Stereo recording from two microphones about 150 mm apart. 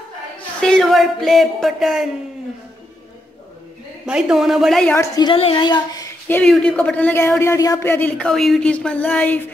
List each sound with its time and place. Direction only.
0.6 s speech: 5° left (ahead or behind)
4.0 s a man's voice: 5° right (ahead or behind)
4.9 s a woman's voice: 20° left (ahead or behind)
6.2 s speech: 15° left (ahead or behind)